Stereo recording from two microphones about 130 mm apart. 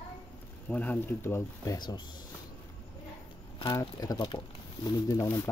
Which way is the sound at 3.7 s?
30° left (ahead or behind).